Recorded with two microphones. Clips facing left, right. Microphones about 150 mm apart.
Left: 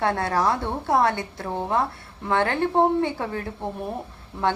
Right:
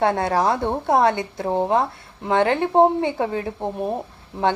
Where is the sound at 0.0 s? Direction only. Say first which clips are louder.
Right 3 dB; 20° right (ahead or behind).